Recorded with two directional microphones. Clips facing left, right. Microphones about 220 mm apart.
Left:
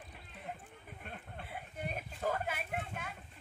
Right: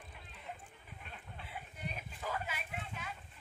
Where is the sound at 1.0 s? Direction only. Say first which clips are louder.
Left 4 dB; 50° left (ahead or behind).